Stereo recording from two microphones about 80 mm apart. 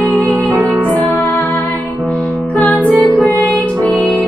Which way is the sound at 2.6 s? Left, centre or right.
Centre.